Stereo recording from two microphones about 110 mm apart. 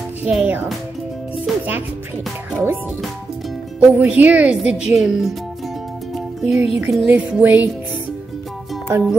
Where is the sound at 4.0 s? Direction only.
15° right (ahead or behind).